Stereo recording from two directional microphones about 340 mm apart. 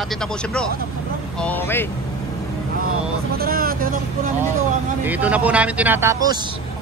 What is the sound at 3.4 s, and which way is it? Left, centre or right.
Vehicle, right.